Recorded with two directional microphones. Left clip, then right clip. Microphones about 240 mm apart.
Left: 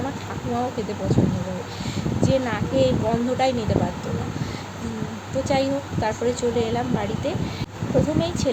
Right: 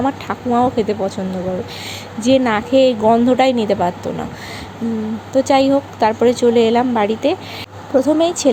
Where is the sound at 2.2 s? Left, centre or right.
Right.